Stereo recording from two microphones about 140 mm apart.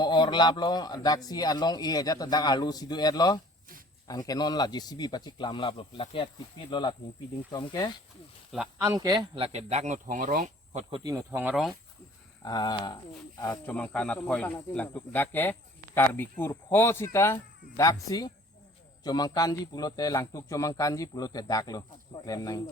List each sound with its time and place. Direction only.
0.0 s a man's voice: 30° left (ahead or behind)
8.8 s speech: 25° right (ahead or behind)
9.3 s speech: 45° right (ahead or behind); by 10.5 s 70° right (ahead or behind)
10.7 s speech: 50° right (ahead or behind)
11.3 s speech: 15° right (ahead or behind)
12.4 s a man's voice: 30° left (ahead or behind)
13.7 s a man's voice: 10° left (ahead or behind); by 22.6 s 25° left (ahead or behind)